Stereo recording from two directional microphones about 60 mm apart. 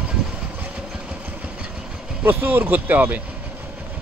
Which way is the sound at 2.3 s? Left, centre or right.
Right.